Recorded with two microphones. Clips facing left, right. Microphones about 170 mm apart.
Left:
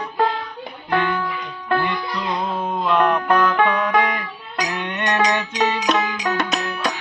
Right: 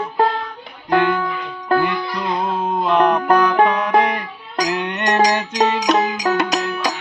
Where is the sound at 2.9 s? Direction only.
35° right (ahead or behind).